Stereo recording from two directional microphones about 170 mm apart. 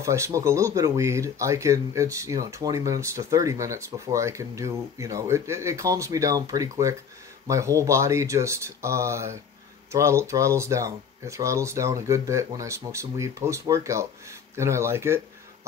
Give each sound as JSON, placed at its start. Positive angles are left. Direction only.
{"t": 0.0, "sound": "speech", "side_deg": -15}